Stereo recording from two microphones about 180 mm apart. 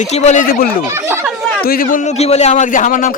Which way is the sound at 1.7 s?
50° left (ahead or behind).